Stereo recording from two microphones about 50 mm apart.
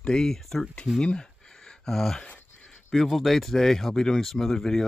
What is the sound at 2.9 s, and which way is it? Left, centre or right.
Speech, centre.